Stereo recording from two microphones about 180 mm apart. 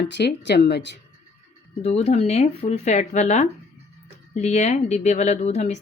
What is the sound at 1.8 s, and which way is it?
Speech, 40° left (ahead or behind).